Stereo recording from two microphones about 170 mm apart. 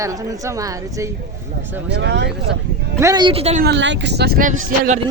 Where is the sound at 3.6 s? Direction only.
90° right; by 4.4 s 75° right (ahead or behind).